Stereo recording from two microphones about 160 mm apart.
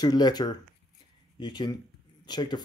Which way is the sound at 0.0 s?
25° left (ahead or behind).